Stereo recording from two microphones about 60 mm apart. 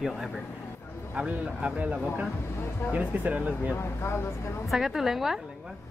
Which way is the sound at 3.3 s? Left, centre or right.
Right.